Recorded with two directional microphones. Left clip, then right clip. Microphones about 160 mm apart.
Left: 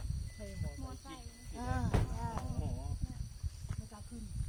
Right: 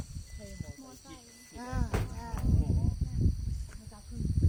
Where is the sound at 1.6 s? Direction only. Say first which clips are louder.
Right 1 dB; 30° right (ahead or behind).